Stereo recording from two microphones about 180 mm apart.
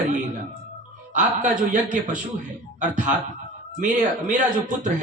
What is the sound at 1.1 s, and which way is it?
A man's voice, 40° right (ahead or behind).